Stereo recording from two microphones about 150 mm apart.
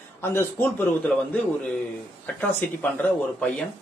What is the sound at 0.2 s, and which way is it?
Speech, 15° left (ahead or behind).